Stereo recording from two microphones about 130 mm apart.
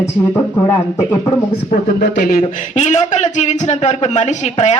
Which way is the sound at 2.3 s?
75° left (ahead or behind).